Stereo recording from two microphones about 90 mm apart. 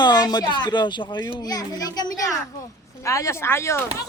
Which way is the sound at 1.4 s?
45° left (ahead or behind).